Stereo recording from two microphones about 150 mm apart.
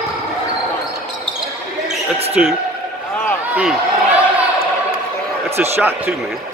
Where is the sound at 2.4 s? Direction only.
5° right (ahead or behind).